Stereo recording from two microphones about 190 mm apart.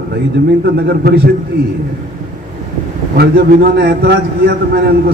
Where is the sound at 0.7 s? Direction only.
60° right (ahead or behind).